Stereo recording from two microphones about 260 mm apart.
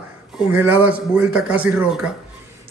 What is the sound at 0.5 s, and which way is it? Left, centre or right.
A man's voice, centre.